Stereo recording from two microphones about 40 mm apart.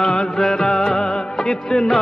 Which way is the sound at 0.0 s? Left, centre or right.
Centre.